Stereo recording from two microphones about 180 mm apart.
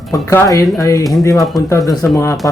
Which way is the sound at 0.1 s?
15° left (ahead or behind).